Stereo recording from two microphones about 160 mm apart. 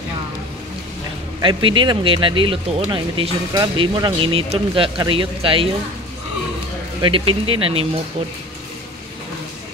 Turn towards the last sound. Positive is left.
turn(degrees=-35)  # may be behind; listen again after turning